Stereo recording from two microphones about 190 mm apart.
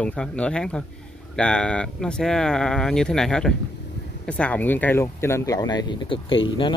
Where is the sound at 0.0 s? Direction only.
5° left (ahead or behind).